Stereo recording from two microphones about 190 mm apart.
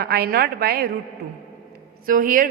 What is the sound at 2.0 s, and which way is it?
Speech, 45° right (ahead or behind).